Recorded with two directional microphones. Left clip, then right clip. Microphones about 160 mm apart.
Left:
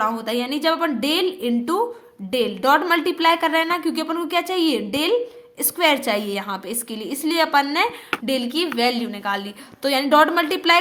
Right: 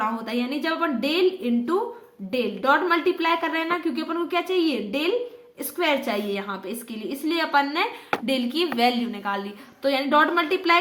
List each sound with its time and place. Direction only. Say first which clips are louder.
0.0 s a woman's voice: left 4 dB; 40° left (ahead or behind)